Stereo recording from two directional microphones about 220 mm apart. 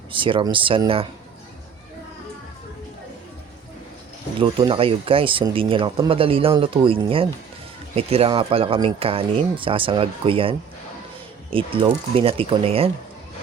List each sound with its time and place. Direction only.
0.1 s speech: 25° right (ahead or behind)
4.4 s speech: 25° right (ahead or behind)
11.5 s speech: 25° right (ahead or behind)